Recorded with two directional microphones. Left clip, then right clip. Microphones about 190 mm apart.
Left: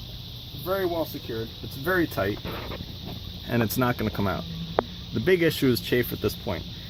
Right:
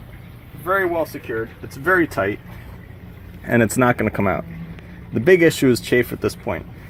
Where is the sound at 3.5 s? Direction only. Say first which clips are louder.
Right 9 dB; 30° right (ahead or behind); by 6.6 s 10° right (ahead or behind).